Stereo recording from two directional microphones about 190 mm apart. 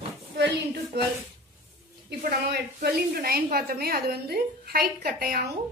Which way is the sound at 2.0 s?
55° right (ahead or behind).